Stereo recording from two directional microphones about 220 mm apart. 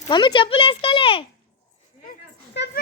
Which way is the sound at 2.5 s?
50° left (ahead or behind).